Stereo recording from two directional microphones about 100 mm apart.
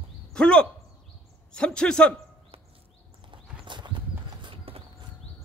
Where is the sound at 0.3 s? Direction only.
10° left (ahead or behind).